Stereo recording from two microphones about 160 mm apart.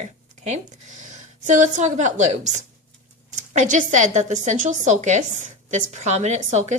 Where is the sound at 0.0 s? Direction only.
45° right (ahead or behind).